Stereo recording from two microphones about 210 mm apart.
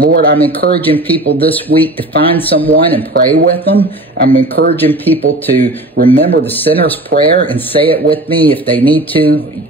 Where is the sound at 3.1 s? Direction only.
45° right (ahead or behind).